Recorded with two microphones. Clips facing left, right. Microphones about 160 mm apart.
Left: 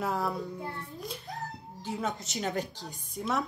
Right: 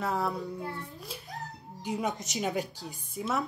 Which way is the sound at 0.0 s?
Centre (ahead or behind).